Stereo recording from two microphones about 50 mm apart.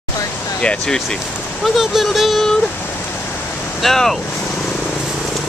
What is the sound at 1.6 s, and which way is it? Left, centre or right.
Speech, centre.